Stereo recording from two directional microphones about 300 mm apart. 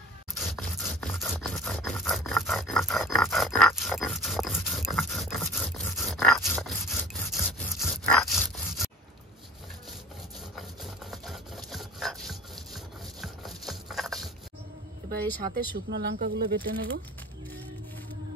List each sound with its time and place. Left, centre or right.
0.3 s scrape: centre
10.8 s rub: centre
15.5 s speech: right